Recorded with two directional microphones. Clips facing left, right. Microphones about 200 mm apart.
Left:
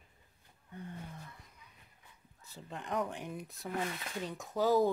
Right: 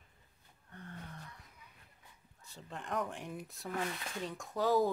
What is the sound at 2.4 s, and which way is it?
Speech, centre (ahead or behind).